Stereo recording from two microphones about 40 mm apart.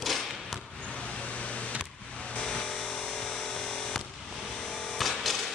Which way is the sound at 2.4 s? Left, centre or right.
Left.